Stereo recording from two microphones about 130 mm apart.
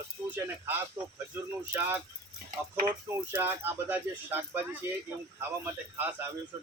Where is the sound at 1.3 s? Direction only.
15° right (ahead or behind).